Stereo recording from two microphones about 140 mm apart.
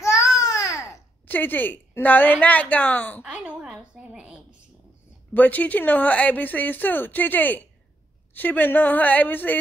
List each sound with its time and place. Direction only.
0.0 s babbling: 25° left (ahead or behind)
1.2 s speech: 15° left (ahead or behind)
3.2 s a sound: 10° right (ahead or behind)
5.3 s speech: 10° left (ahead or behind)